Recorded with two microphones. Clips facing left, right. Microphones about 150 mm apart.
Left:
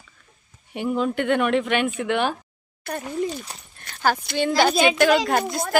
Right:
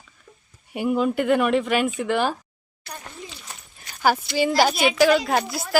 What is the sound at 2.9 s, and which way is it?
Speech, 50° left (ahead or behind).